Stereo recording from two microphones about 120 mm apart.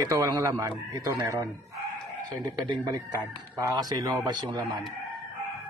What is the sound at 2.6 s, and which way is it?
Speech, 30° right (ahead or behind).